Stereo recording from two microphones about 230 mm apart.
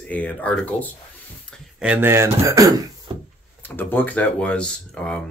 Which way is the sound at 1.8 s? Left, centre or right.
Centre.